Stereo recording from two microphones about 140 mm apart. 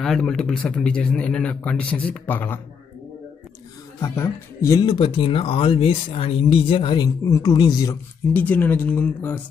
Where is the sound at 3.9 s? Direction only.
20° left (ahead or behind).